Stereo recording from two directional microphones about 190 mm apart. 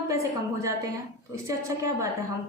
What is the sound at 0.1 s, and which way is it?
A woman's voice, 15° right (ahead or behind).